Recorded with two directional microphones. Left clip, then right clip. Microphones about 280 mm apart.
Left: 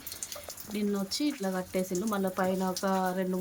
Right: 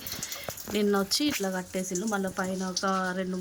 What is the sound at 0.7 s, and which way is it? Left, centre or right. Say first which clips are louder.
Speech: right 7 dB; centre.